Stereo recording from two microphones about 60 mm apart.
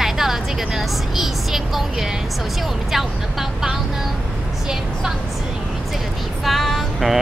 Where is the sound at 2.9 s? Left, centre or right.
Centre.